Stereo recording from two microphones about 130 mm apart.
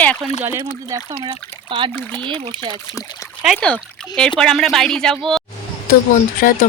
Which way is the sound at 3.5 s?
10° left (ahead or behind).